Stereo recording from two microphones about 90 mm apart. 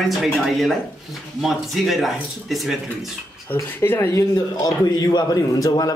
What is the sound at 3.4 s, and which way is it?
A man's voice, 25° left (ahead or behind).